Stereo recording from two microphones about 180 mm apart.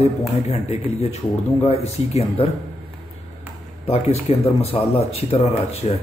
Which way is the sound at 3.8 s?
35° left (ahead or behind).